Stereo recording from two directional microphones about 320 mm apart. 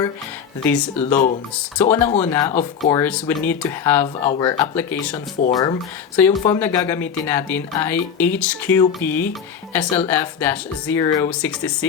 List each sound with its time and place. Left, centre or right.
0.6 s speech: centre
1.1 s speech: left
1.8 s speech: centre